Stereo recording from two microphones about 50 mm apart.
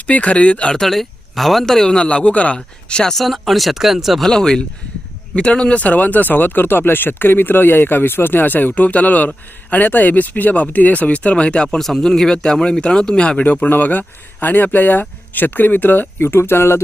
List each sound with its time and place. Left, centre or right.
0.1 s speech: left
0.8 s speech: centre; by 2.6 s left
2.9 s speech: centre
4.2 s speech: centre; by 16.0 s left
16.2 s speech: left